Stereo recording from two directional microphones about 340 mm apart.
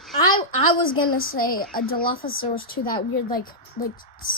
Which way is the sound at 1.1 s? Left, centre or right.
Left.